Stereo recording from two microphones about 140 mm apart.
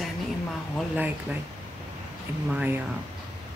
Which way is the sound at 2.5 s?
15° right (ahead or behind).